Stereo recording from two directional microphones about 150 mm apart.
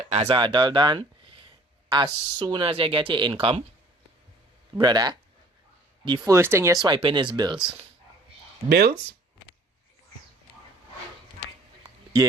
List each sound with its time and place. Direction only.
0.1 s speech: 45° right (ahead or behind)
0.3 s speech: 30° right (ahead or behind)
4.8 s speech: 25° right (ahead or behind)
6.8 s speech: 30° right (ahead or behind)
8.7 s speech: 90° right